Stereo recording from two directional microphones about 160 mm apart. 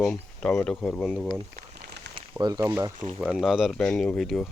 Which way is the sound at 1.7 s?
90° right.